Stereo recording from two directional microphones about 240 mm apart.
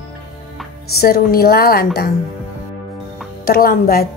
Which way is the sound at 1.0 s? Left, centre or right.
Left.